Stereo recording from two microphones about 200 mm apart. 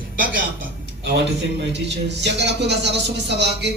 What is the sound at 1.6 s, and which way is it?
Speech, 60° right (ahead or behind).